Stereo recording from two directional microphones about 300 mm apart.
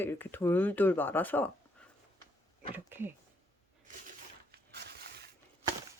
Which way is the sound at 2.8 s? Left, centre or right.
Centre.